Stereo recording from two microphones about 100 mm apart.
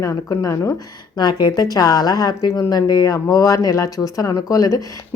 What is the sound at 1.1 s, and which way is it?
A woman's voice, 45° left (ahead or behind).